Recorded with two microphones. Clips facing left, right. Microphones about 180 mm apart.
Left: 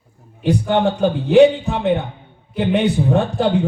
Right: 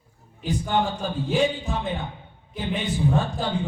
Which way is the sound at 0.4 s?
70° left (ahead or behind).